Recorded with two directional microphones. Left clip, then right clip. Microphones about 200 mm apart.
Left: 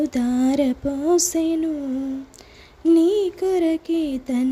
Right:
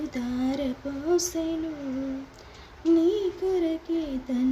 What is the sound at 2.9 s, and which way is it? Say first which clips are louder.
Music: left 6 dB; 45° left (ahead or behind).